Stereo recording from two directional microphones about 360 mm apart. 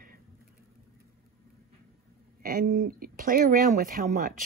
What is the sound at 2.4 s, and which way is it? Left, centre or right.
Speech, right.